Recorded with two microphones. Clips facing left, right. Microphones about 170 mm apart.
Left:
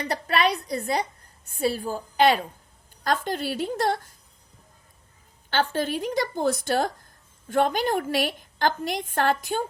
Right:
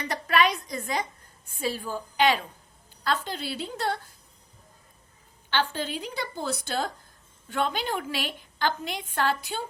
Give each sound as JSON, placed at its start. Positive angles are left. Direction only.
{"t": 0.0, "sound": "a woman's voice", "side_deg": 35}
{"t": 3.0, "sound": "a woman's voice", "side_deg": 50}
{"t": 5.5, "sound": "a woman's voice", "side_deg": 45}